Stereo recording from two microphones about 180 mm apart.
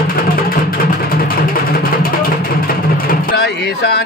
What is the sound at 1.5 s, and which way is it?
Music, 50° left (ahead or behind).